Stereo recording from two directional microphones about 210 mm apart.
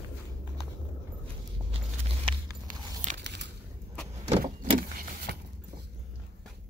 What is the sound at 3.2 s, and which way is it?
Crunch, 55° right (ahead or behind).